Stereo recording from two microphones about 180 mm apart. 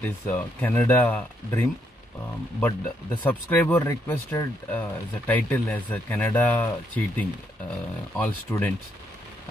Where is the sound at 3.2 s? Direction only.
10° left (ahead or behind).